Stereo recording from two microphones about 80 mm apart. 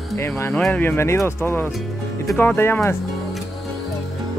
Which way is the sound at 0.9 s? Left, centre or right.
Left.